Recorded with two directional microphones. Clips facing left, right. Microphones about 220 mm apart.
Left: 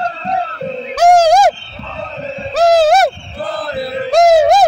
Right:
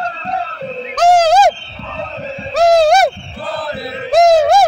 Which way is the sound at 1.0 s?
15° left (ahead or behind).